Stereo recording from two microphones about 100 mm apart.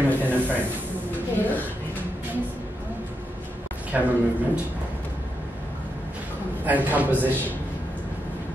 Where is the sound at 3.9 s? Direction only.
15° right (ahead or behind).